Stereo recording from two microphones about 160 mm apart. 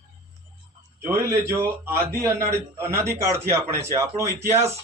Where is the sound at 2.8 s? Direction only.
15° right (ahead or behind).